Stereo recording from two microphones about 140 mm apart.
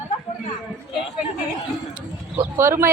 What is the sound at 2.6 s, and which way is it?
Speech, 20° right (ahead or behind).